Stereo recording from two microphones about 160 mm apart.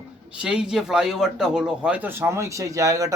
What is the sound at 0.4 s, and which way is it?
A man's voice, 5° right (ahead or behind).